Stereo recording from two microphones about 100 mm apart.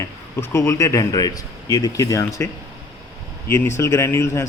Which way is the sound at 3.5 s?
25° left (ahead or behind).